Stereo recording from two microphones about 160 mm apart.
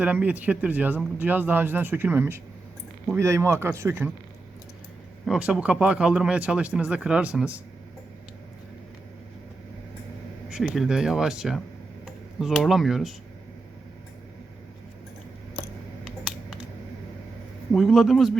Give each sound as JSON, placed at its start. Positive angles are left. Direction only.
{"t": 0.0, "sound": "speech", "side_deg": -10}
{"t": 5.2, "sound": "speech", "side_deg": -5}
{"t": 10.5, "sound": "speech", "side_deg": 0}
{"t": 16.0, "sound": "a sound", "side_deg": 0}
{"t": 17.7, "sound": "speech", "side_deg": 0}